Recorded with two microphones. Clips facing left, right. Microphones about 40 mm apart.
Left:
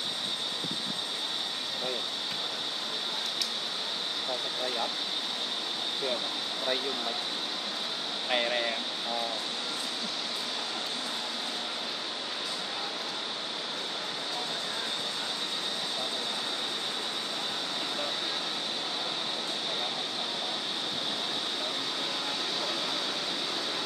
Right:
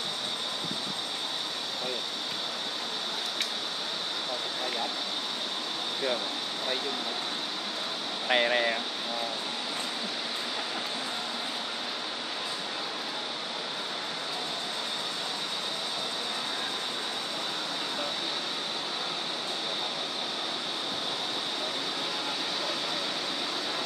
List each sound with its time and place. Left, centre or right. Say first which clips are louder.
8.3 s speech: right 4 dB; centre